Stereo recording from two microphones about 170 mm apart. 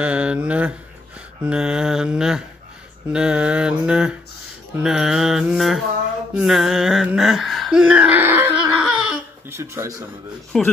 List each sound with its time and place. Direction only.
0.0 s speech: 5° right (ahead or behind)
1.4 s mantra: 5° right (ahead or behind)
6.3 s a sound: centre (ahead or behind)
9.5 s speech: 15° right (ahead or behind)
10.5 s mantra: centre (ahead or behind)